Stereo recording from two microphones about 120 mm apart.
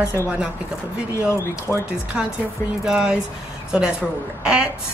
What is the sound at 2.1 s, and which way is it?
Speech, 5° right (ahead or behind).